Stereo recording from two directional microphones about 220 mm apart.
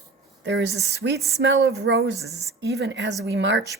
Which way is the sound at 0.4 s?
50° right (ahead or behind).